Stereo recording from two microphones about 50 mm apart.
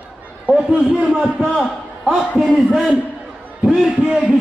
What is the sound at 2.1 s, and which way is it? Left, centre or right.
A man's voice, centre.